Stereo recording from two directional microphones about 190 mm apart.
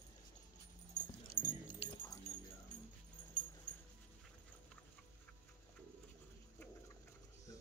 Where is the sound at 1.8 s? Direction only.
20° left (ahead or behind).